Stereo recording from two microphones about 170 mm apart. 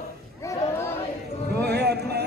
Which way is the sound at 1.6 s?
75° right (ahead or behind).